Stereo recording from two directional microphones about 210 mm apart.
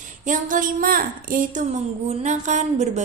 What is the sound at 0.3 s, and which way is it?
Speech, 40° right (ahead or behind).